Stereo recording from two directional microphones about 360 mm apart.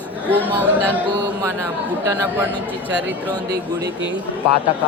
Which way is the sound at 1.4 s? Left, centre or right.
Centre.